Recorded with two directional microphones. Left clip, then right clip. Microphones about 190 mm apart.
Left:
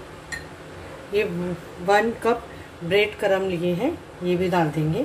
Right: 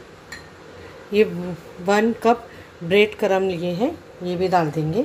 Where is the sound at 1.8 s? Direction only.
45° right (ahead or behind).